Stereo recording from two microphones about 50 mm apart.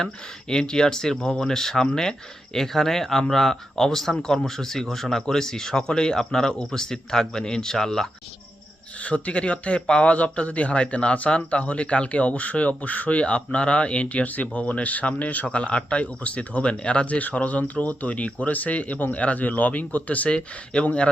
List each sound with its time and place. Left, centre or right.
0.0 s speech: centre
9.0 s a man's voice: left